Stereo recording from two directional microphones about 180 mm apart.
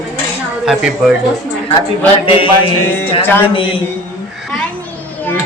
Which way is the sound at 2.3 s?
30° left (ahead or behind).